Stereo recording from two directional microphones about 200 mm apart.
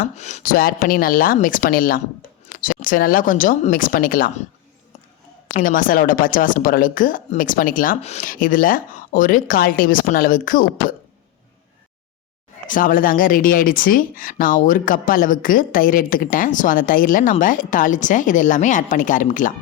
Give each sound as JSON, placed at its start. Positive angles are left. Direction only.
{"t": 0.0, "sound": "speech", "side_deg": 35}
{"t": 5.5, "sound": "speech", "side_deg": 45}
{"t": 12.6, "sound": "speech", "side_deg": 45}